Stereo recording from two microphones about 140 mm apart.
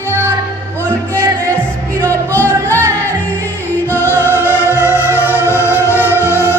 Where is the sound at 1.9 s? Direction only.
20° right (ahead or behind).